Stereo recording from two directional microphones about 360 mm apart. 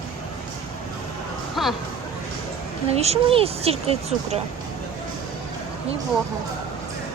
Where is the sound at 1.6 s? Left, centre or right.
Centre.